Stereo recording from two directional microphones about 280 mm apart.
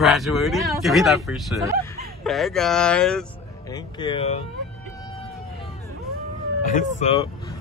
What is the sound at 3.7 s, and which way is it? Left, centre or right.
Speech, centre.